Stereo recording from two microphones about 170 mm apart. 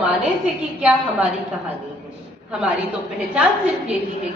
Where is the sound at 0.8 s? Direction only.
10° right (ahead or behind).